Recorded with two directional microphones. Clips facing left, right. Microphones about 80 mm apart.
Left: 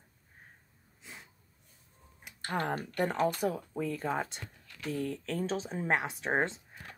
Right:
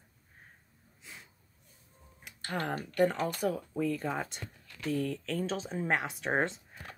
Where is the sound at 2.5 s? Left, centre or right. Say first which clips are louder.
Left 1 dB; left.